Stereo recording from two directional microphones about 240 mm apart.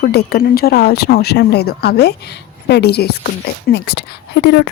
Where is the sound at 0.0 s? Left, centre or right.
Left.